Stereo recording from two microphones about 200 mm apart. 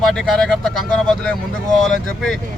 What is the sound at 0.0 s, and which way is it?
Speech, centre (ahead or behind).